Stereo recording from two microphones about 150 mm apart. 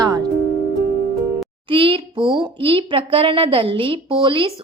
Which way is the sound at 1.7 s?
35° right (ahead or behind).